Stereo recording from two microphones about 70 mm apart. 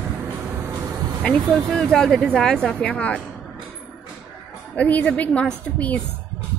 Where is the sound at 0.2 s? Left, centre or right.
Right.